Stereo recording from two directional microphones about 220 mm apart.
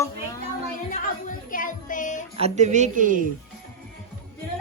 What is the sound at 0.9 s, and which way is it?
Speech, 35° left (ahead or behind).